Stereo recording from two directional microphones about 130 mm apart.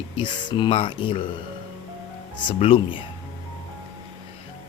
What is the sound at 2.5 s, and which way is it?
Speech, 45° left (ahead or behind).